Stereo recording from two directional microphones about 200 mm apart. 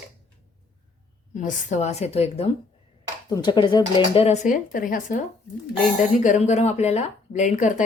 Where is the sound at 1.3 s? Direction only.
35° left (ahead or behind).